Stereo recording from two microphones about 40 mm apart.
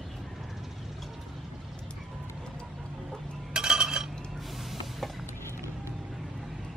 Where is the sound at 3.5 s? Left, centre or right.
Centre.